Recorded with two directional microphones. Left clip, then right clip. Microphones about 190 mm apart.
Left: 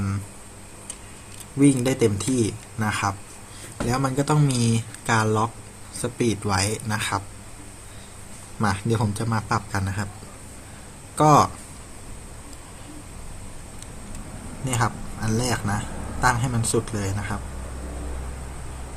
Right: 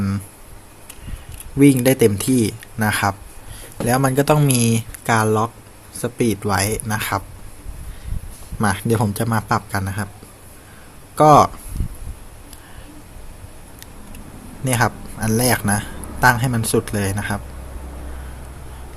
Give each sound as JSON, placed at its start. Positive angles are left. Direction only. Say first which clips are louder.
{"t": 1.5, "sound": "speech", "louder": "right 6 dB", "side_deg": -45}
{"t": 8.5, "sound": "speech", "louder": "right 5 dB", "side_deg": -40}
{"t": 11.2, "sound": "speech", "louder": "right 6 dB", "side_deg": -35}
{"t": 14.6, "sound": "speech", "louder": "right 6 dB", "side_deg": -45}